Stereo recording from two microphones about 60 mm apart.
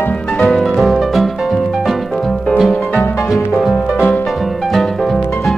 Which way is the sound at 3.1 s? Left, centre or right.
Left.